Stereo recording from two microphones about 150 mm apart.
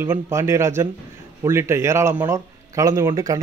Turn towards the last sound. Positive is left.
turn(degrees=-20)  # may be behind; listen again after turning